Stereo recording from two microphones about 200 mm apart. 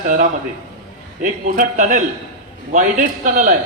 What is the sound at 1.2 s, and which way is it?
A man's voice, 40° right (ahead or behind).